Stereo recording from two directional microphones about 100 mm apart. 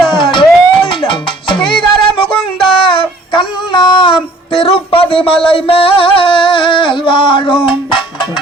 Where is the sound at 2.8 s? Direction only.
55° left (ahead or behind).